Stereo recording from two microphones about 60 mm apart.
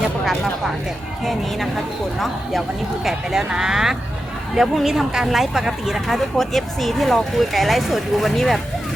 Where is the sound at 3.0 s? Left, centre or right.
Centre.